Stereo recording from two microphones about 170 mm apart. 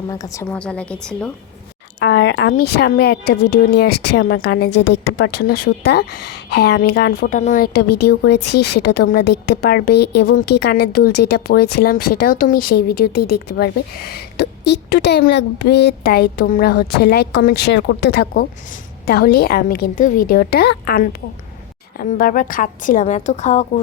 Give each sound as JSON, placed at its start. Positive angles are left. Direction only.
{"t": 0.1, "sound": "a woman's voice", "side_deg": 20}
{"t": 0.4, "sound": "a woman's voice", "side_deg": 5}
{"t": 2.0, "sound": "a woman's voice", "side_deg": 90}